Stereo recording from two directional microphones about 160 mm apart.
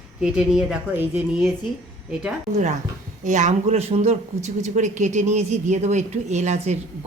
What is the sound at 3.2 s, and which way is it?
Speech, 50° right (ahead or behind).